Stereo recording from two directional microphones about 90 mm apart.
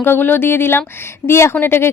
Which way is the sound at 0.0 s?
25° left (ahead or behind).